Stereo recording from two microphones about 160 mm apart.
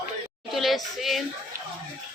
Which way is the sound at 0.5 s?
Centre (ahead or behind).